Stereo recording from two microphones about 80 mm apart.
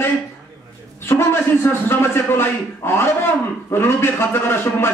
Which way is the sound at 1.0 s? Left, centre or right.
Left.